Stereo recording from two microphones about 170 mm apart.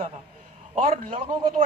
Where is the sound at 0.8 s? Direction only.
55° right (ahead or behind).